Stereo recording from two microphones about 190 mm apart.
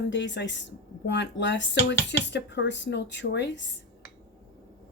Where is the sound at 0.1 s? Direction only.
70° left (ahead or behind).